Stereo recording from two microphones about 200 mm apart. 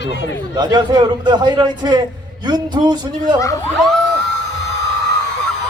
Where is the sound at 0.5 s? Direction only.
20° right (ahead or behind).